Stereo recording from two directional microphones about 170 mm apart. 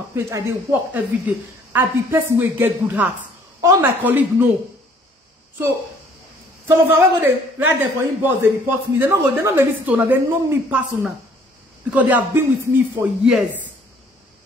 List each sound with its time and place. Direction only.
0.1 s a woman's voice: 15° right (ahead or behind)
6.7 s a woman's voice: 15° right (ahead or behind)